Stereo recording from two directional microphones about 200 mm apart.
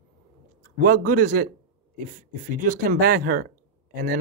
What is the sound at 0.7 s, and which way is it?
Speech, 45° right (ahead or behind).